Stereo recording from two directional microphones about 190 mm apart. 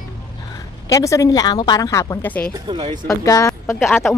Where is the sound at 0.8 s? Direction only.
15° left (ahead or behind).